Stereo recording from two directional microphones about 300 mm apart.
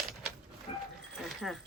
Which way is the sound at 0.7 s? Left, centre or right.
Centre.